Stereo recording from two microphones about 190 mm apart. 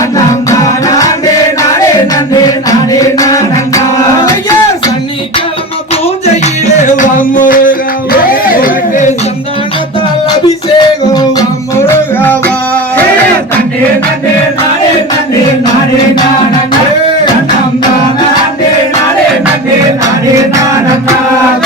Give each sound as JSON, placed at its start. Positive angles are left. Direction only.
{"t": 2.6, "sound": "music", "side_deg": 20}
{"t": 6.4, "sound": "music", "side_deg": 40}
{"t": 8.3, "sound": "chatter", "side_deg": 50}
{"t": 10.8, "sound": "music", "side_deg": 20}